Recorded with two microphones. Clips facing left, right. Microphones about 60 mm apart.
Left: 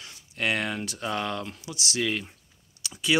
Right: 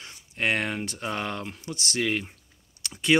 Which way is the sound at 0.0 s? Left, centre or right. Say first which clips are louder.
Right 1 dB; right.